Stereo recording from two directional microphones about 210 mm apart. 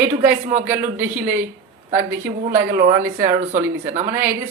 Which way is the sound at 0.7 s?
10° right (ahead or behind).